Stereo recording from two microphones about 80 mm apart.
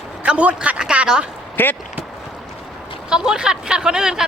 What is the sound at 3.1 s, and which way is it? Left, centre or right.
Speech, centre.